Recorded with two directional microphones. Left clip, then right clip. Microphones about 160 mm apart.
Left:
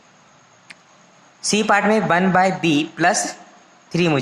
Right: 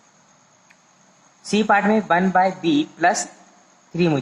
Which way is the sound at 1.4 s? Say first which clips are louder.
Left 1 dB; 40° left (ahead or behind).